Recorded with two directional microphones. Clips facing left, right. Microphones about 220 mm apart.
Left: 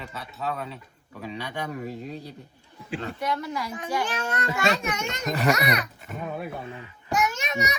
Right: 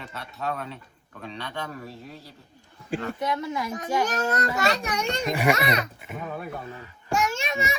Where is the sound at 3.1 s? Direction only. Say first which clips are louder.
Right 1 dB; 20° right (ahead or behind).